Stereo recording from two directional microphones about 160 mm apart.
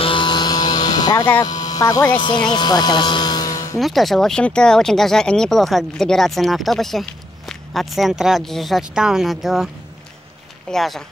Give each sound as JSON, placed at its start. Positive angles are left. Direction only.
{"t": 0.0, "sound": "a sound", "side_deg": 30}
{"t": 2.1, "sound": "speech", "side_deg": 30}
{"t": 3.7, "sound": "speech", "side_deg": 0}
{"t": 10.7, "sound": "speech", "side_deg": 0}